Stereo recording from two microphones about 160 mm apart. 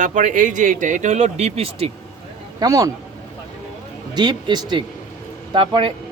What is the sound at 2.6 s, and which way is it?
Speech, 20° right (ahead or behind).